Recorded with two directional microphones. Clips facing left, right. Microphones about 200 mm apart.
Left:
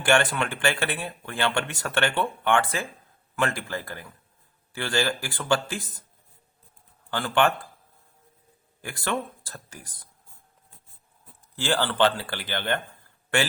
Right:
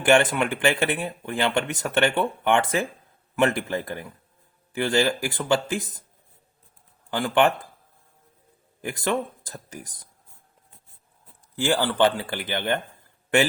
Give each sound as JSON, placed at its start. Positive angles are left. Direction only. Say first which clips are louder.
{"t": 0.0, "sound": "speech", "louder": "right 4 dB", "side_deg": -20}
{"t": 7.1, "sound": "speech", "louder": "right 3 dB", "side_deg": -15}
{"t": 8.8, "sound": "speech", "louder": "right 4 dB", "side_deg": -20}
{"t": 11.5, "sound": "speech", "louder": "right 3 dB", "side_deg": -15}